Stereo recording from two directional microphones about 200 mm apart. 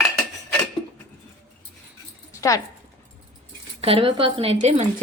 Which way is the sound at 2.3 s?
15° left (ahead or behind).